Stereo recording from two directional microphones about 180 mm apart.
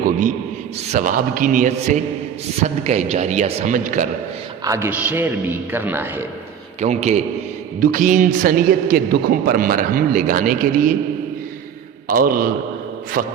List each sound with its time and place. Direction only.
0.0 s a sound: 45° right (ahead or behind)
0.9 s a man's voice: 50° right (ahead or behind)
4.6 s a man's voice: 15° right (ahead or behind)
6.7 s a man's voice: 40° right (ahead or behind)
12.0 s a man's voice: 50° right (ahead or behind)